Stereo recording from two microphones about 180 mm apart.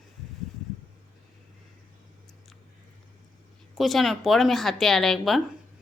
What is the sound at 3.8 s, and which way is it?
A woman's voice, centre (ahead or behind).